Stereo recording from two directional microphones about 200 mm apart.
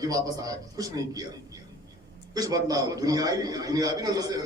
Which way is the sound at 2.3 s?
20° right (ahead or behind).